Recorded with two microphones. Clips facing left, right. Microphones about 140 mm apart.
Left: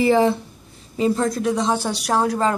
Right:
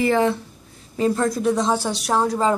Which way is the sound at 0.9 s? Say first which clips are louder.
Even; 5° left (ahead or behind).